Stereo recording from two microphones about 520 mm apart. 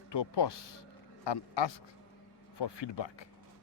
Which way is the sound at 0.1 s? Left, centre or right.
Left.